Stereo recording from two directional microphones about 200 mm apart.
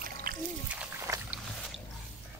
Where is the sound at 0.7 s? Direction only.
10° right (ahead or behind).